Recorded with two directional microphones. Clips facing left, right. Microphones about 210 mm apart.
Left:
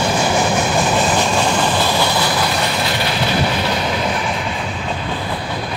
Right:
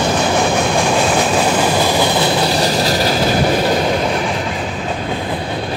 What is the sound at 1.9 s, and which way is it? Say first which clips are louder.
Train: right 3 dB; 20° right (ahead or behind).